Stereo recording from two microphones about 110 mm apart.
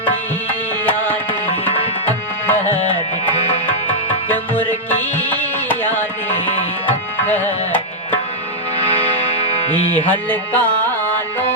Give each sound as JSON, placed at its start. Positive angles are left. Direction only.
{"t": 0.9, "sound": "music", "side_deg": 15}
{"t": 2.0, "sound": "tabla", "side_deg": 15}
{"t": 4.3, "sound": "music", "side_deg": 15}
{"t": 6.8, "sound": "tabla", "side_deg": 15}
{"t": 9.9, "sound": "music", "side_deg": 15}